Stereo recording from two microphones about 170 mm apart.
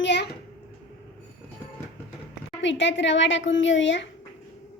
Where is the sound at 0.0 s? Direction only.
90° left.